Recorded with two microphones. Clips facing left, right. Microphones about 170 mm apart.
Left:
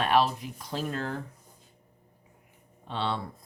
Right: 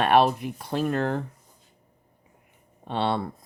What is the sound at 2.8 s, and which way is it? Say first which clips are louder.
Speech: right 6 dB; 60° right (ahead or behind).